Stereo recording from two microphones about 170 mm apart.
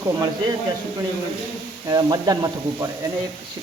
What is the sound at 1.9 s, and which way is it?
Speech, 20° right (ahead or behind).